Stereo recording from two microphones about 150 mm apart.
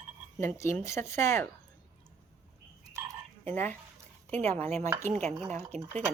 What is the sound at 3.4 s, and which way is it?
Speech, 10° left (ahead or behind).